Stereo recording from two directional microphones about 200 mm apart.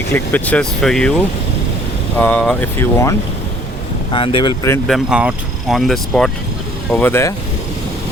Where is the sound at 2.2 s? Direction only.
10° left (ahead or behind).